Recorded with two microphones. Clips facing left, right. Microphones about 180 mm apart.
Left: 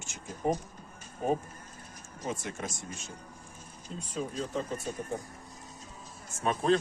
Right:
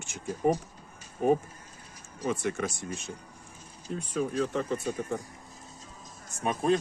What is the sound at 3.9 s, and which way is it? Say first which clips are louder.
Speech: right 6 dB; 65° right (ahead or behind).